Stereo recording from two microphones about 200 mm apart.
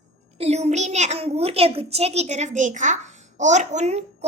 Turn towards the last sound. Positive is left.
turn(degrees=-35)  # may be behind; listen again after turning